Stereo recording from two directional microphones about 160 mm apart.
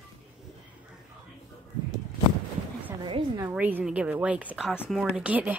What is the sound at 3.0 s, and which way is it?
Speech, 25° right (ahead or behind).